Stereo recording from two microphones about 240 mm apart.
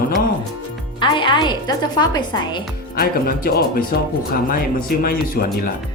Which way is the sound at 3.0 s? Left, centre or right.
Left.